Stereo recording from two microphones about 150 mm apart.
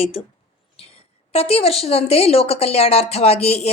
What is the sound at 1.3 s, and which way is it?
A woman's voice, 40° left (ahead or behind).